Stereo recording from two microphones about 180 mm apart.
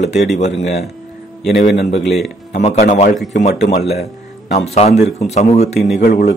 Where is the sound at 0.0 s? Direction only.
40° left (ahead or behind).